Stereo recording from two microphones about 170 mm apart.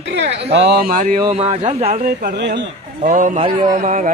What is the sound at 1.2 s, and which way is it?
Speech, 40° right (ahead or behind).